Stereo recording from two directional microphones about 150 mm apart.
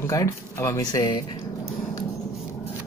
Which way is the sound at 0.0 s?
20° left (ahead or behind).